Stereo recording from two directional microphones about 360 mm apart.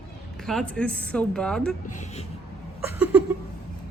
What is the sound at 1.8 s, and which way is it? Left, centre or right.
Speech, centre.